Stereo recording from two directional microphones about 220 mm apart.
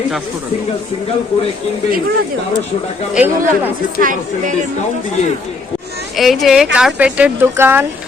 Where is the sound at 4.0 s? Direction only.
35° right (ahead or behind).